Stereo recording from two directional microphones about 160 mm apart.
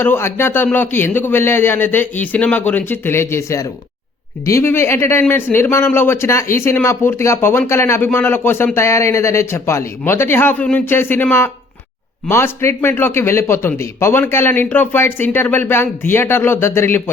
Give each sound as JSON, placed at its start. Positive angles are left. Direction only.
{"t": 0.0, "sound": "speech", "side_deg": 15}